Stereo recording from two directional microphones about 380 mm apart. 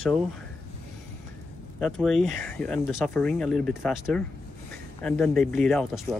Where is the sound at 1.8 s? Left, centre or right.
Centre.